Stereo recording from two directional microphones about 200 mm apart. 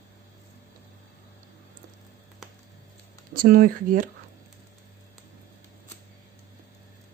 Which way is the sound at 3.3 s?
45° right (ahead or behind).